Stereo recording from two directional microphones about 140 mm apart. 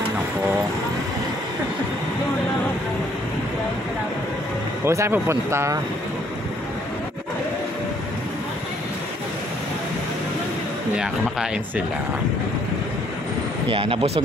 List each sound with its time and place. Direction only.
4.8 s speech: 20° right (ahead or behind)
11.0 s speech: 5° right (ahead or behind)
13.7 s speech: 40° right (ahead or behind)